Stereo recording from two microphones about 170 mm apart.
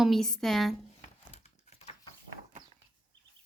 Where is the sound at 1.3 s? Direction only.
40° left (ahead or behind).